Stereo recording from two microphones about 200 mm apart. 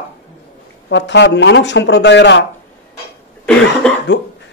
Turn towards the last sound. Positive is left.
turn(degrees=5)  # may be behind; listen again after turning